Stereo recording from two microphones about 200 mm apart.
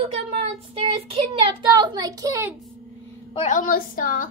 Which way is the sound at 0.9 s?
25° right (ahead or behind).